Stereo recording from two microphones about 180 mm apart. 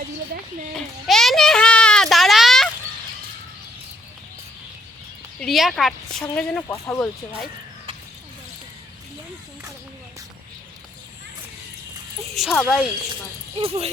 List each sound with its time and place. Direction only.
0.7 s a sound: 5° left (ahead or behind)
5.4 s a woman's voice: centre (ahead or behind)
12.3 s speech: centre (ahead or behind)
13.6 s speech: 35° right (ahead or behind)